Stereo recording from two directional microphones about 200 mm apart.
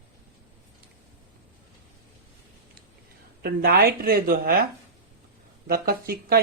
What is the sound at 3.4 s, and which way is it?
Speech, 50° right (ahead or behind).